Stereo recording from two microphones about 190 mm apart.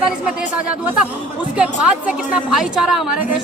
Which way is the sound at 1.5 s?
5° right (ahead or behind).